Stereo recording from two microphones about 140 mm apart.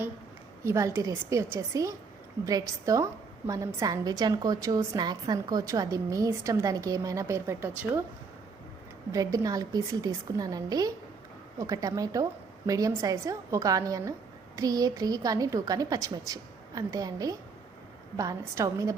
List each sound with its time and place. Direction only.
0.6 s a woman's voice: 20° right (ahead or behind)
9.1 s a woman's voice: 25° right (ahead or behind)